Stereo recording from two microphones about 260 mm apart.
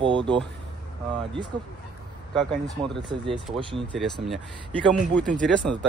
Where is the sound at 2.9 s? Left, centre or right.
Centre.